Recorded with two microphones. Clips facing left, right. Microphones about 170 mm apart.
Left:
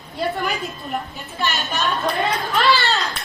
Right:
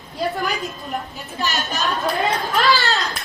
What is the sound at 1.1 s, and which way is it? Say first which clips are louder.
Speech: even; 40° right (ahead or behind).